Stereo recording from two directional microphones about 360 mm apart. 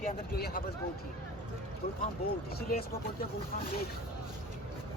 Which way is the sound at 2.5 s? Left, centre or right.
Left.